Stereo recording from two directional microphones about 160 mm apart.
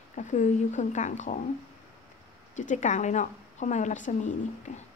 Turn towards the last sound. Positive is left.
turn(degrees=45)  # may be behind; listen again after turning